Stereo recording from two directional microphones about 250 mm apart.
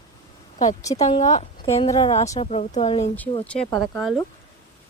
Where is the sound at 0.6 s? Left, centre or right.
Left.